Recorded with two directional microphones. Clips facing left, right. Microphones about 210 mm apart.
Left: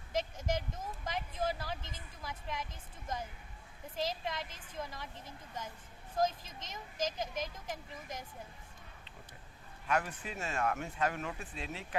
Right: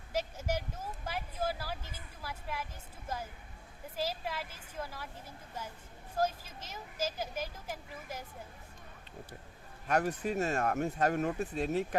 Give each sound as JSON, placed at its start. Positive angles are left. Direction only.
{"t": 0.1, "sound": "speech", "side_deg": -10}
{"t": 3.9, "sound": "speech", "side_deg": -5}
{"t": 6.1, "sound": "speech", "side_deg": -5}
{"t": 9.8, "sound": "speech", "side_deg": -40}